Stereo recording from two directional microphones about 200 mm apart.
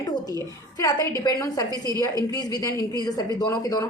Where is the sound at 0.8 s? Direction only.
15° left (ahead or behind).